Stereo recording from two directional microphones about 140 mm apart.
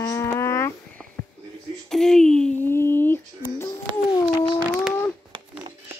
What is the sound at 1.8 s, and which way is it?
Speech, 5° left (ahead or behind).